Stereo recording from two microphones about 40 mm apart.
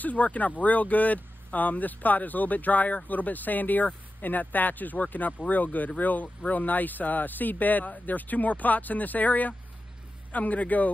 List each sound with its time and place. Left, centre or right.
0.0 s speech: left